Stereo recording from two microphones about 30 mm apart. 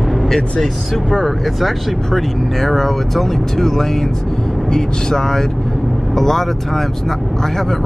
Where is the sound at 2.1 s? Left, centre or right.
Centre.